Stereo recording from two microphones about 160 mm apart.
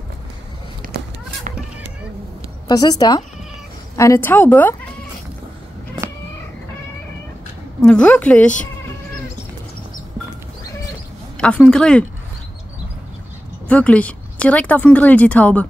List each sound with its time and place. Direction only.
0.8 s a sound: 60° right (ahead or behind)
2.7 s a woman's voice: 25° left (ahead or behind)
7.8 s speech: 5° left (ahead or behind)
11.3 s a woman's voice: 5° left (ahead or behind)
13.7 s speech: 10° left (ahead or behind)